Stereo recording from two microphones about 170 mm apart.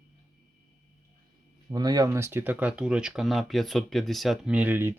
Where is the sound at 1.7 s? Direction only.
25° right (ahead or behind).